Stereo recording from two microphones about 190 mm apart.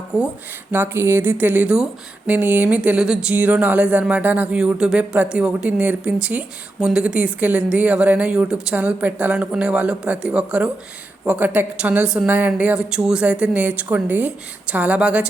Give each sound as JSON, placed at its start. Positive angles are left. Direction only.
{"t": 0.1, "sound": "speech", "side_deg": -5}